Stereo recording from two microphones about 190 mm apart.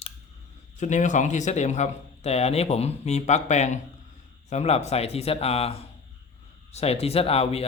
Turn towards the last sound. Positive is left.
turn(degrees=30)  # may be behind; listen again after turning